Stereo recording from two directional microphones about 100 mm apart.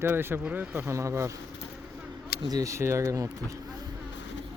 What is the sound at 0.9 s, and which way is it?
Speech, 30° right (ahead or behind).